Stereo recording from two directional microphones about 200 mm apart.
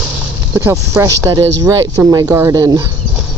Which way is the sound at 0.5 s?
15° right (ahead or behind).